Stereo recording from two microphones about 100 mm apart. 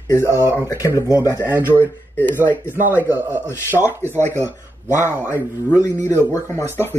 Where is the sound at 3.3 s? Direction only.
25° left (ahead or behind).